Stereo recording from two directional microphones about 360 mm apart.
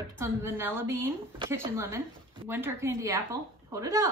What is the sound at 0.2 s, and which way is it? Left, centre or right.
A woman's voice, centre.